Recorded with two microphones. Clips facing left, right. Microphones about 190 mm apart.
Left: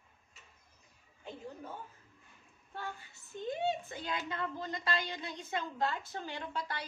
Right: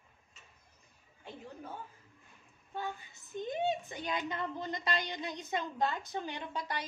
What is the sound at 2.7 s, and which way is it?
A woman's voice, 15° right (ahead or behind).